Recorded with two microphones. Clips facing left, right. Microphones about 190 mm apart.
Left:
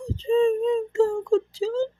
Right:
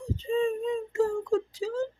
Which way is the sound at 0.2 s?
30° left (ahead or behind).